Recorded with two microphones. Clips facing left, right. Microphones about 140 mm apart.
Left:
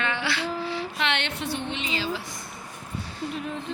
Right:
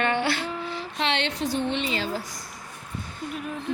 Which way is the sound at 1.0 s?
30° right (ahead or behind).